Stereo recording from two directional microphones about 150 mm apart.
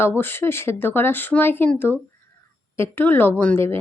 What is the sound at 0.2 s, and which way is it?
Speech, 15° left (ahead or behind).